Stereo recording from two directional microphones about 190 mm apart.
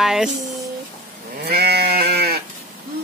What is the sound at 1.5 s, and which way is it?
Sheep, 55° right (ahead or behind).